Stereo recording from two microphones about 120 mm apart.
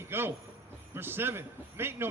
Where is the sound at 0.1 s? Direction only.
20° right (ahead or behind).